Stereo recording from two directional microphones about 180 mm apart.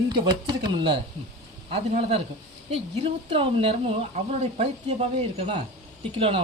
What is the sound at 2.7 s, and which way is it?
A woman's voice, 30° right (ahead or behind).